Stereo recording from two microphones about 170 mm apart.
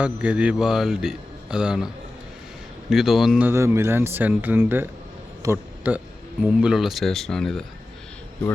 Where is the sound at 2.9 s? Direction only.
Centre (ahead or behind).